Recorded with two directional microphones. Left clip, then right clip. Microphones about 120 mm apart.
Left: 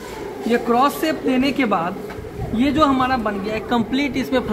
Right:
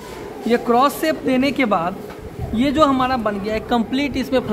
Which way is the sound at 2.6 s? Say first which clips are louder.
Right 1 dB; 65° right (ahead or behind).